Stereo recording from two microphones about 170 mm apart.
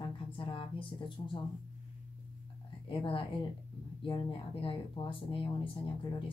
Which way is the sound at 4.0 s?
30° left (ahead or behind).